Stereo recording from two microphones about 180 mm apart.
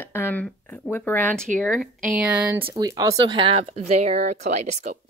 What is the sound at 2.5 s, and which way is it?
Speech, 25° right (ahead or behind).